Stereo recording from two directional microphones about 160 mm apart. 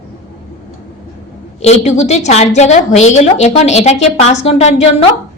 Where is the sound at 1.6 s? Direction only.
45° left (ahead or behind).